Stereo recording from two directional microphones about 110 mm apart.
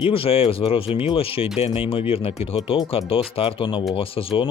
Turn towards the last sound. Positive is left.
turn(degrees=55)  # may be behind; listen again after turning